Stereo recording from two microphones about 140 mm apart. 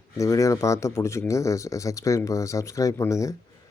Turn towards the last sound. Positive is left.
turn(degrees=20)  # may be behind; listen again after turning